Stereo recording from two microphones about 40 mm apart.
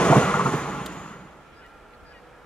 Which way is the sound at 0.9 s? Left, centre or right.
Left.